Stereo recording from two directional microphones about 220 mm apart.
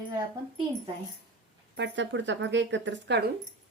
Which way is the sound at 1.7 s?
55° right (ahead or behind).